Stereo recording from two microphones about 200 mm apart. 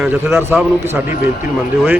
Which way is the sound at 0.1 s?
15° right (ahead or behind).